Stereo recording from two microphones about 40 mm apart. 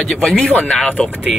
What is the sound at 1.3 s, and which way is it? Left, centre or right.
Speech, centre.